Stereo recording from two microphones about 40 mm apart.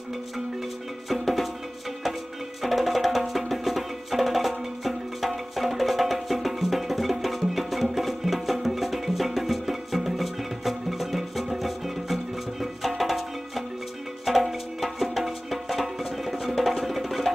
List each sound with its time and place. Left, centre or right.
1.0 s music: centre
2.6 s music: centre